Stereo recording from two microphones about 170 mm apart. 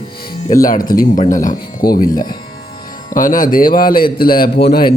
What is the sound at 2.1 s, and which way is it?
Speech, 25° left (ahead or behind).